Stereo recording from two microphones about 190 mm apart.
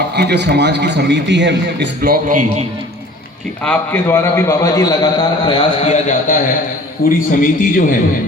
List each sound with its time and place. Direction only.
0.2 s a man's voice: 60° right (ahead or behind)
3.6 s a man's voice: 10° left (ahead or behind); by 7.9 s 45° left (ahead or behind)